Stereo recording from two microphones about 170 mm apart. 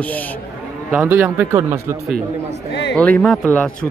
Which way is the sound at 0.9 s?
10° right (ahead or behind).